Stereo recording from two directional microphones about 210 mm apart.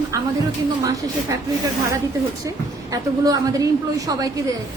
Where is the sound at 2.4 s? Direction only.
15° right (ahead or behind).